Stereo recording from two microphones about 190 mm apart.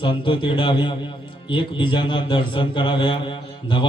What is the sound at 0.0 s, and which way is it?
A man's voice, 25° left (ahead or behind).